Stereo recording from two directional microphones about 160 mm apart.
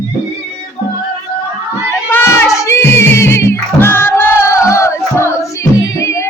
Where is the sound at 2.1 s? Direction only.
15° left (ahead or behind).